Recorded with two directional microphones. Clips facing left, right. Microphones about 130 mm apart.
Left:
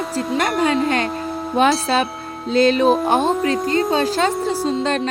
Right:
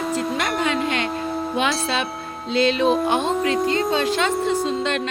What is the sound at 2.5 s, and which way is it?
Speech, 40° left (ahead or behind).